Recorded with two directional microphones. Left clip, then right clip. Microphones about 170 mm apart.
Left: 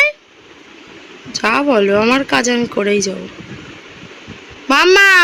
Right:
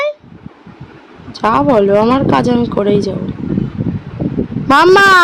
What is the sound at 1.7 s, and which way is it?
Speech, 15° right (ahead or behind).